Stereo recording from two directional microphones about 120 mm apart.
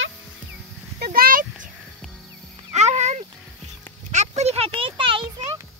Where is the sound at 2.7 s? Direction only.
70° right (ahead or behind); by 5.2 s 45° right (ahead or behind).